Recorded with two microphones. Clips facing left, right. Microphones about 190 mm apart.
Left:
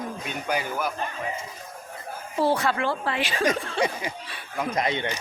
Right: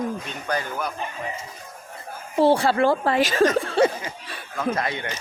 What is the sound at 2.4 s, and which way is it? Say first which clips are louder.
Speech: right 6 dB; 30° right (ahead or behind).